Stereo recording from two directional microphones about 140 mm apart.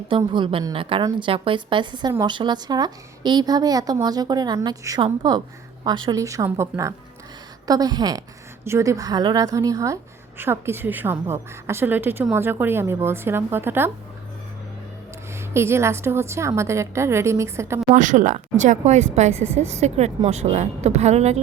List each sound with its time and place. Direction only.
0.3 s a woman's voice: 35° right (ahead or behind); by 13.9 s 15° right (ahead or behind)
15.5 s a woman's voice: 20° right (ahead or behind)
17.9 s speech: 65° right (ahead or behind)